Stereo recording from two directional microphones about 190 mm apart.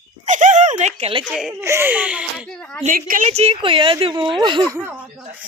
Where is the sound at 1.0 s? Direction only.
30° right (ahead or behind).